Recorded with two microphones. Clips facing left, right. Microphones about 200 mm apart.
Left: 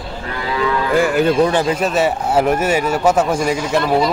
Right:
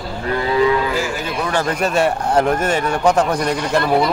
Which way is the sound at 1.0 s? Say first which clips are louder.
Left 9 dB; 55° left (ahead or behind).